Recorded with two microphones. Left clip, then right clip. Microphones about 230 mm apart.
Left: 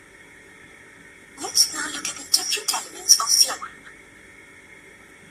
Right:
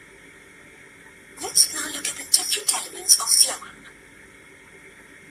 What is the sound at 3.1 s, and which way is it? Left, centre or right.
Speech, centre.